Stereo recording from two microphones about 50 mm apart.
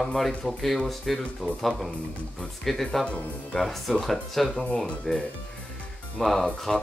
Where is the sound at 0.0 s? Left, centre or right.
Centre.